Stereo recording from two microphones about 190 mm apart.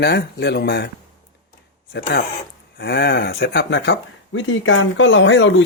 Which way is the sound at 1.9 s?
60° left (ahead or behind).